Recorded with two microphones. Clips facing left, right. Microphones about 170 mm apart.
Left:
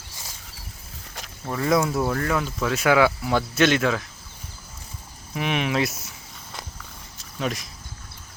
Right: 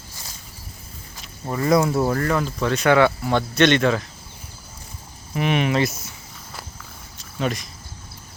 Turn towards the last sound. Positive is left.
turn(degrees=0)  # may be behind; listen again after turning